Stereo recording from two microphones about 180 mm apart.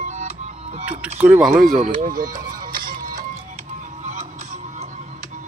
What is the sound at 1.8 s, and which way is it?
Music, 50° right (ahead or behind).